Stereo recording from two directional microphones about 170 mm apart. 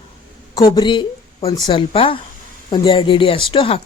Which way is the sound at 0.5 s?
25° left (ahead or behind).